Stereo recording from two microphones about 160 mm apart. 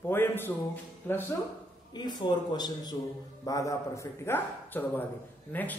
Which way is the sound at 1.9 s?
25° left (ahead or behind).